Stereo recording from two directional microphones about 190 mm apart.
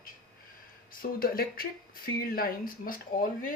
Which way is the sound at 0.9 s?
50° left (ahead or behind).